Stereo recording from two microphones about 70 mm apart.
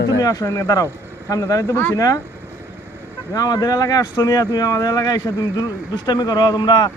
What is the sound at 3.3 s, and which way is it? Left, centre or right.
Speech, left.